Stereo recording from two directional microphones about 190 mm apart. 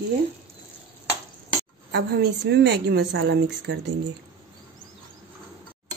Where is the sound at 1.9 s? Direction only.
60° right (ahead or behind).